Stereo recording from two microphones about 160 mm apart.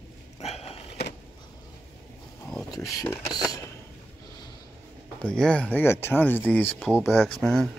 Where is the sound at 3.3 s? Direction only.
25° left (ahead or behind).